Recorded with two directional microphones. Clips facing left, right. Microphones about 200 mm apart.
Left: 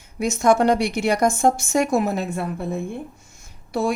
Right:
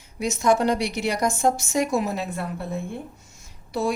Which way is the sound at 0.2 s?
50° left (ahead or behind).